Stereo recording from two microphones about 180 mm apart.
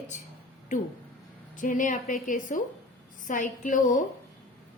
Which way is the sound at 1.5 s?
45° left (ahead or behind).